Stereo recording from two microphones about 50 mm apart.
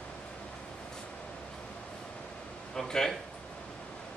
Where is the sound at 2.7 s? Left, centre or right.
Centre.